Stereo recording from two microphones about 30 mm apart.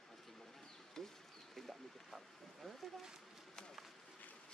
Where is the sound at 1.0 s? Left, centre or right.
Centre.